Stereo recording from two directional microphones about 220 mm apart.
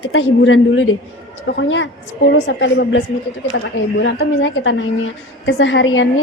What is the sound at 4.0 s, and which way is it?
A woman's voice, 55° left (ahead or behind).